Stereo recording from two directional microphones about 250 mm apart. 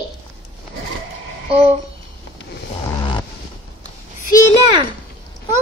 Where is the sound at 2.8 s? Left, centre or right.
Centre.